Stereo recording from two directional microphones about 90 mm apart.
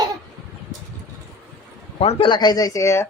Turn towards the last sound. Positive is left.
turn(degrees=30)  # may be behind; listen again after turning